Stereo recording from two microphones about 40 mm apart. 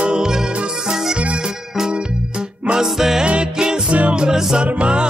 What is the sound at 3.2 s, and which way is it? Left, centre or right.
Music, right.